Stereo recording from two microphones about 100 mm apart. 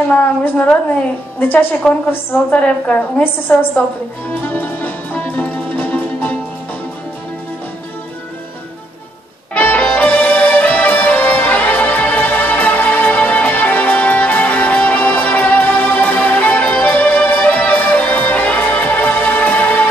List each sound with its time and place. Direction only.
0.1 s a woman's voice: 15° left (ahead or behind)
4.3 s music: 20° left (ahead or behind)
9.5 s music: 15° left (ahead or behind)